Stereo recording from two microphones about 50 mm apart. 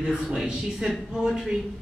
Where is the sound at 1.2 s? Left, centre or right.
Centre.